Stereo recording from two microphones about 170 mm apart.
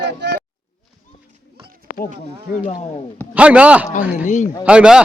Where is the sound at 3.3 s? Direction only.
5° right (ahead or behind).